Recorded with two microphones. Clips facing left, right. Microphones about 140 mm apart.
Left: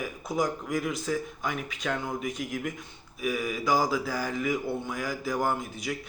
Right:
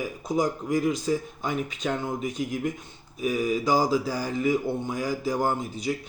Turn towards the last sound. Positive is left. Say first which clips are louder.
# right 3 dB
turn(degrees=-30)  # may be behind; listen again after turning